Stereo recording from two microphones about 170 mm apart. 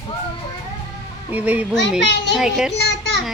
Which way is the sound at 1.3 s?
10° right (ahead or behind).